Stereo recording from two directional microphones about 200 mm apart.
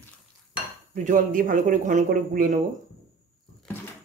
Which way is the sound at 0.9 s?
40° right (ahead or behind).